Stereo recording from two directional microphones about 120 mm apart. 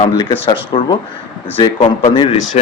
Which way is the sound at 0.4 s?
40° left (ahead or behind).